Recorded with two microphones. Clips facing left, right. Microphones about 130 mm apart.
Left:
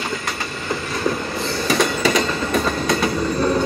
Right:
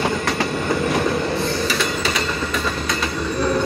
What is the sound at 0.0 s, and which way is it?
Train, 70° right (ahead or behind).